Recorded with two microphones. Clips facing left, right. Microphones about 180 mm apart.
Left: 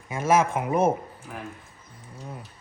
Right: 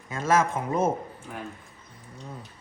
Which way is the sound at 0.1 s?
15° left (ahead or behind).